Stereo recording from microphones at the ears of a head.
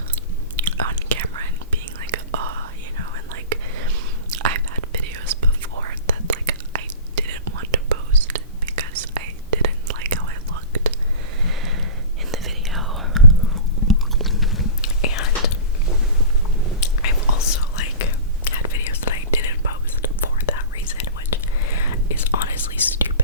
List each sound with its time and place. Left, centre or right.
0.5 s whispering: right
13.2 s chewing: left
14.5 s whispering: left
16.8 s whispering: left